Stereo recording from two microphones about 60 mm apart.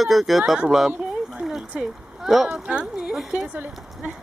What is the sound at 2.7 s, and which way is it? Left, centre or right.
Speech, centre.